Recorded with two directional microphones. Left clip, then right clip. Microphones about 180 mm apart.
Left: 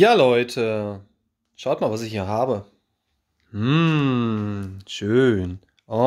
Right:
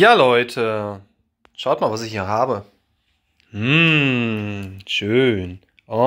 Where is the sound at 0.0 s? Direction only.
30° left (ahead or behind).